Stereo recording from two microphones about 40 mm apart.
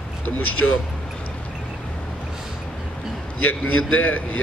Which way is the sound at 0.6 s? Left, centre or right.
Left.